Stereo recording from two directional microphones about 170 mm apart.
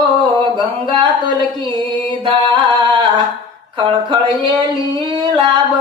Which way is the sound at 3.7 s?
25° right (ahead or behind).